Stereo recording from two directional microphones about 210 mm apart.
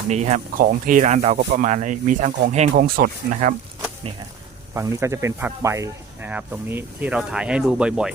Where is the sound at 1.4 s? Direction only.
50° right (ahead or behind).